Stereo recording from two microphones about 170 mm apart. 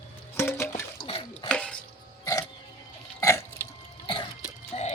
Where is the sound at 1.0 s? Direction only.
30° left (ahead or behind).